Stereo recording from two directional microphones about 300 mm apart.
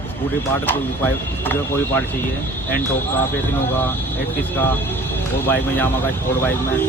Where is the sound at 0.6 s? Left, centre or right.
Centre.